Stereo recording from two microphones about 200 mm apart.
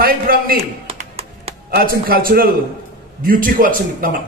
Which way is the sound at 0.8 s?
30° right (ahead or behind).